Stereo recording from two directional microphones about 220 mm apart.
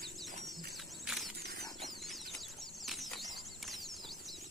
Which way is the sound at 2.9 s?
Centre (ahead or behind).